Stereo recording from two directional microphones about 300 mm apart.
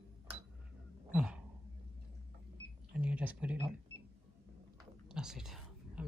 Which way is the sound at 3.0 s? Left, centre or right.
Centre.